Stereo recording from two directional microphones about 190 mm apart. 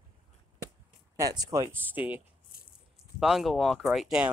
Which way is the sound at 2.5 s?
50° left (ahead or behind).